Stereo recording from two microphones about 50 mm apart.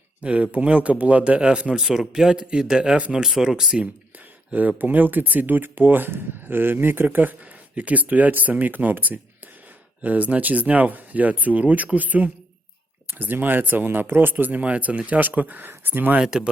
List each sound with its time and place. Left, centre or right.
0.2 s speech: right
1.8 s speech: centre
4.8 s speech: right